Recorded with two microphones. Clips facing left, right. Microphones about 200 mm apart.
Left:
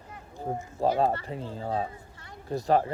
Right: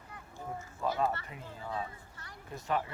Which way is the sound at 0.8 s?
35° left (ahead or behind).